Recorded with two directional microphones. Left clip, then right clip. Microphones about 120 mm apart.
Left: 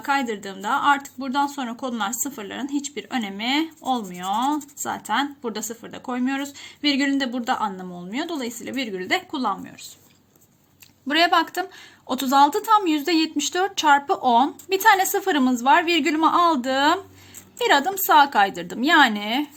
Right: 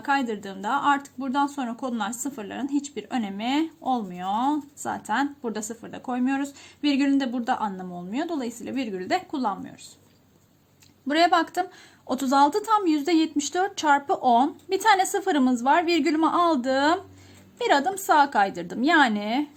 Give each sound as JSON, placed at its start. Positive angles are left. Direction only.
{"t": 0.0, "sound": "a woman's voice", "side_deg": -45}
{"t": 11.1, "sound": "a woman's voice", "side_deg": -40}